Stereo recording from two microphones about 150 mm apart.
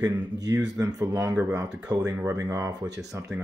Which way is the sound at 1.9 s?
25° right (ahead or behind).